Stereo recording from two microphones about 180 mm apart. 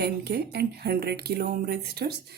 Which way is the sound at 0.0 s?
65° right (ahead or behind).